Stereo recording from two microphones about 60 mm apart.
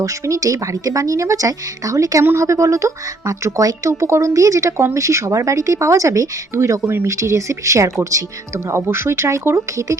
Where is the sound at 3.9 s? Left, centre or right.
Right.